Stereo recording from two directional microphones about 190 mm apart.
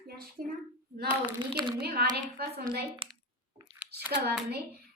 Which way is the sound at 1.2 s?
25° right (ahead or behind).